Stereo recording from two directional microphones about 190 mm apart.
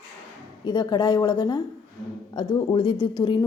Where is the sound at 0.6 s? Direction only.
25° left (ahead or behind).